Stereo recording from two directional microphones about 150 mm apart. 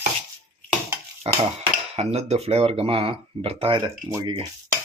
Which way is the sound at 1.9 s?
45° right (ahead or behind).